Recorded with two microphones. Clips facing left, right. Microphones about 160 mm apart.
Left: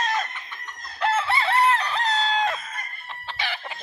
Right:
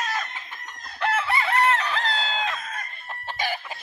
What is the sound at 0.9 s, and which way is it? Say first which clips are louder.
Chicken: left 1 dB; 25° left (ahead or behind).